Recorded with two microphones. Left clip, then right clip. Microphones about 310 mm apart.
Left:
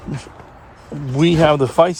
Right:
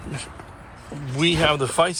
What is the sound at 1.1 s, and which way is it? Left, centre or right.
Speech, left.